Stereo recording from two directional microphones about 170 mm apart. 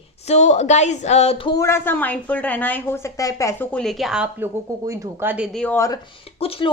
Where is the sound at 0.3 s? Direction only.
40° left (ahead or behind).